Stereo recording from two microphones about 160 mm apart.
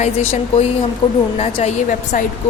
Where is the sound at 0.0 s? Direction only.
40° left (ahead or behind).